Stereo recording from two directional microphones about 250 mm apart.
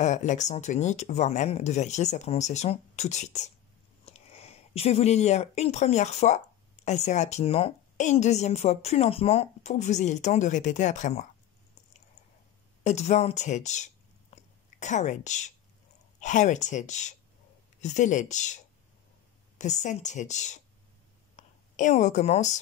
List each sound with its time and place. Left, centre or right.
0.0 s speech: left
12.8 s speech: left
19.6 s a woman's voice: left